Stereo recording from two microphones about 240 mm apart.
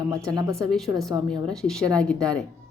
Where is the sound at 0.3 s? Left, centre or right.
Centre.